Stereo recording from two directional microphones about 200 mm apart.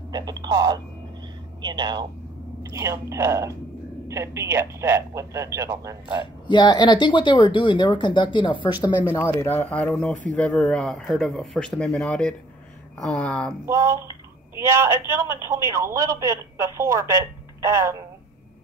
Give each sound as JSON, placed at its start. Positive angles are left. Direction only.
{"t": 0.1, "sound": "a man's voice", "side_deg": -20}
{"t": 6.4, "sound": "speech", "side_deg": 20}
{"t": 9.1, "sound": "speech", "side_deg": 15}
{"t": 13.7, "sound": "a man's voice", "side_deg": -15}